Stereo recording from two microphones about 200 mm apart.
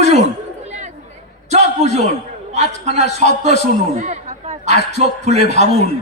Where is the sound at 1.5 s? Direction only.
35° right (ahead or behind).